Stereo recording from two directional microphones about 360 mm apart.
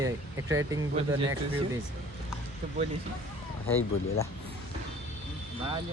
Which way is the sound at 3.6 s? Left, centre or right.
Left.